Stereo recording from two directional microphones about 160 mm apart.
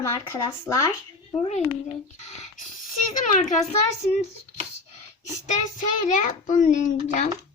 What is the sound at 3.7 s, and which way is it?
Speech, 45° left (ahead or behind).